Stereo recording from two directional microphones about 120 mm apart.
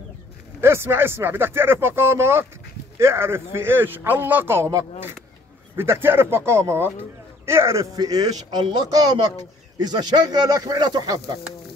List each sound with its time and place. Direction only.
0.6 s speech: 20° right (ahead or behind)